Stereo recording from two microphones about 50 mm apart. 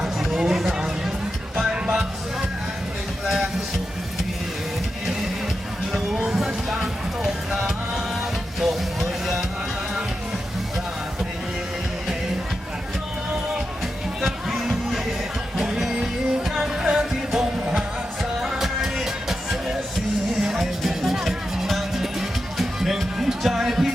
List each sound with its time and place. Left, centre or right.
0.0 s a sound: centre
1.6 s music: centre
3.2 s music: centre
5.9 s music: centre
14.2 s music: centre